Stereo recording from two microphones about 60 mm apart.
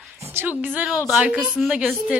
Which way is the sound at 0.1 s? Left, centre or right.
Right.